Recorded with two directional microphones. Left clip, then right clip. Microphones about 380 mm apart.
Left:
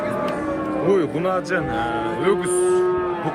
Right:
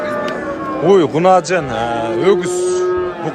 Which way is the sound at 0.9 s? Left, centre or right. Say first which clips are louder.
Right 11 dB; centre.